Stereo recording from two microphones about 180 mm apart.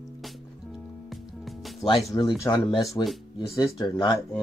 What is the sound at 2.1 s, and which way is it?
Speech, 25° left (ahead or behind).